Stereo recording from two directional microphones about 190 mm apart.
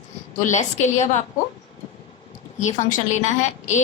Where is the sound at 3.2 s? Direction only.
40° left (ahead or behind).